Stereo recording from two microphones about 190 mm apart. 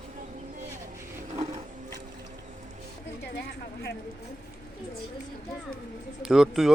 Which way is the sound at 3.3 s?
65° left (ahead or behind).